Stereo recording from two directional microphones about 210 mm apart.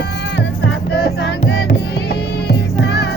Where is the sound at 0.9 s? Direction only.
55° left (ahead or behind).